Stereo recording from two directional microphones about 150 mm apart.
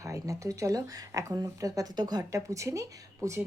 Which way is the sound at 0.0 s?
20° right (ahead or behind).